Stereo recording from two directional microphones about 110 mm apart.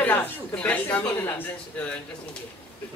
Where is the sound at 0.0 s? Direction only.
15° left (ahead or behind).